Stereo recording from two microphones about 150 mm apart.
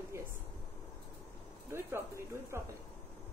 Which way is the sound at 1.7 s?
15° right (ahead or behind).